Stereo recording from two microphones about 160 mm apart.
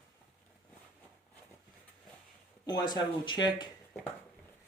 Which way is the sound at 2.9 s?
25° left (ahead or behind).